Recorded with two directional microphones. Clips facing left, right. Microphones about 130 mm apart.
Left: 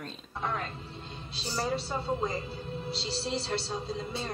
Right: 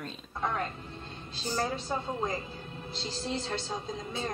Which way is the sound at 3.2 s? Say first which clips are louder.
Even; 35° left (ahead or behind).